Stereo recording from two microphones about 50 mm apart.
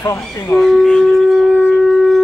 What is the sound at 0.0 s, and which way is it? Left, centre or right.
Speech, left.